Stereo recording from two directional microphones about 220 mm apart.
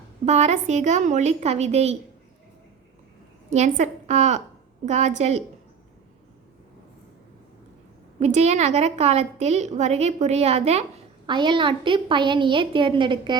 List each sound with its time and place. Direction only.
0.3 s a woman's voice: 30° right (ahead or behind)
3.5 s a woman's voice: 30° right (ahead or behind)
8.2 s a woman's voice: 30° right (ahead or behind)